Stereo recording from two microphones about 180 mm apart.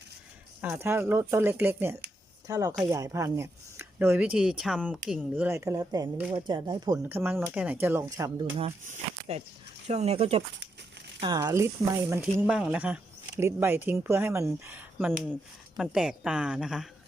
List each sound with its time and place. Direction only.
0.6 s speech: 10° right (ahead or behind)
7.0 s speech: 10° right (ahead or behind)
9.8 s speech: 35° right (ahead or behind)
11.2 s speech: 25° right (ahead or behind); by 16.9 s 5° right (ahead or behind)